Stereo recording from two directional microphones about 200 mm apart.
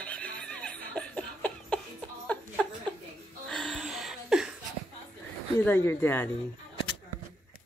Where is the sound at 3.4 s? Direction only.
Centre (ahead or behind).